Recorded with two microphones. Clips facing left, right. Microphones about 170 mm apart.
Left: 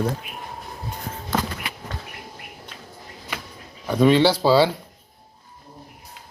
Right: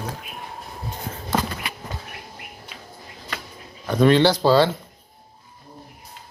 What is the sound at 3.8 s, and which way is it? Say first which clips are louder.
Speech: even; 5° left (ahead or behind).